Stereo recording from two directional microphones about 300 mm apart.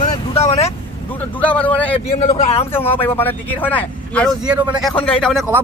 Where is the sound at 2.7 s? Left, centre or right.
Centre.